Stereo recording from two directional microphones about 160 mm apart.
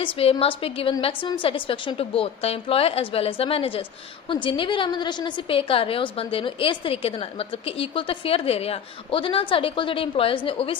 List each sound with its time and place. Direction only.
0.0 s a woman's voice: 35° left (ahead or behind)